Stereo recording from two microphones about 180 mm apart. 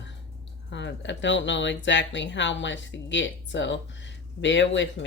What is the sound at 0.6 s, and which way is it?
Speech, 80° left.